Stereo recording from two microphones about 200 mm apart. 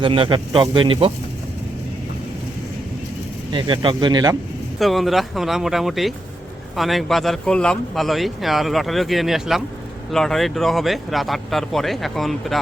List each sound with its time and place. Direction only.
0.0 s speech: 25° right (ahead or behind)
3.5 s speech: 25° right (ahead or behind)
4.8 s speech: centre (ahead or behind)